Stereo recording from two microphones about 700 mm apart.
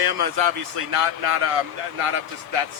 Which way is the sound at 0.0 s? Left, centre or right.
Right.